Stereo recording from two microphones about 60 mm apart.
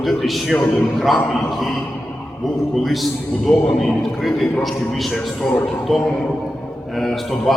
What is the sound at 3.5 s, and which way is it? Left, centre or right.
Speech, centre.